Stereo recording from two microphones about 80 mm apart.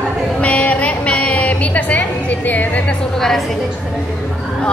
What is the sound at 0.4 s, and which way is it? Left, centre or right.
Music, centre.